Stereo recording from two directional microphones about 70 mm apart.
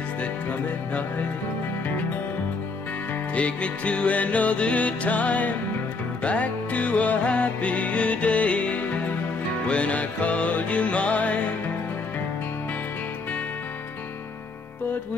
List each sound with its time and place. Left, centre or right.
0.2 s music: centre
3.3 s music: centre